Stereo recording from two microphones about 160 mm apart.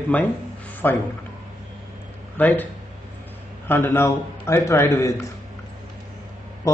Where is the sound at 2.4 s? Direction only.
10° left (ahead or behind).